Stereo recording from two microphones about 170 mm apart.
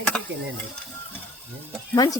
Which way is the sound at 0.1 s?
5° left (ahead or behind).